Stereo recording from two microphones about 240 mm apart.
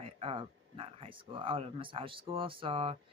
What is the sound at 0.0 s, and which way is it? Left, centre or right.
Speech, right.